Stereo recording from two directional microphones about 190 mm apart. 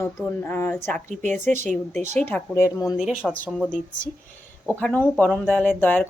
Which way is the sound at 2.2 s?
10° left (ahead or behind).